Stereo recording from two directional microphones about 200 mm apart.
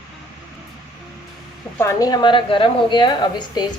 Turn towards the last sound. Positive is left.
turn(degrees=20)  # may be behind; listen again after turning